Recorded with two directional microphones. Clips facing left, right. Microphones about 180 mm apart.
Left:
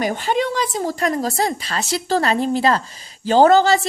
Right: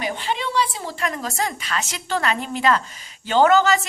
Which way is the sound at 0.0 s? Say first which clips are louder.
Left 6 dB; 45° left (ahead or behind).